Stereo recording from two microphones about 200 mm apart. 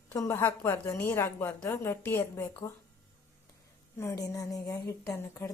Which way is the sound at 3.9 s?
15° left (ahead or behind).